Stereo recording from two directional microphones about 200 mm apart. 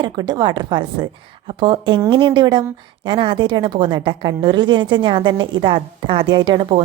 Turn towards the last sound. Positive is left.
turn(degrees=-25)  # may be behind; listen again after turning